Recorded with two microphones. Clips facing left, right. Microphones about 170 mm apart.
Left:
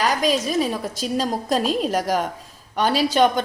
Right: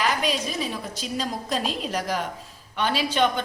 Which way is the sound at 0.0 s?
40° left (ahead or behind).